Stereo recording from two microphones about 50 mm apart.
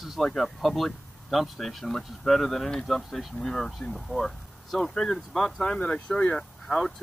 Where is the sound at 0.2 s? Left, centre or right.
Centre.